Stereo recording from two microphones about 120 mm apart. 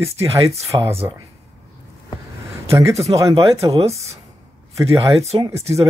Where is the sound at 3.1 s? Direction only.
30° right (ahead or behind).